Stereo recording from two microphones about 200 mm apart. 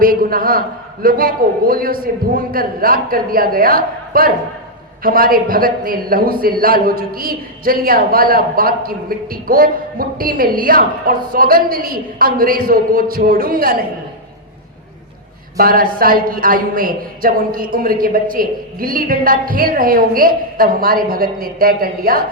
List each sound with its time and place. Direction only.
0.0 s a man's voice: 45° right (ahead or behind)
15.5 s a man's voice: 45° right (ahead or behind)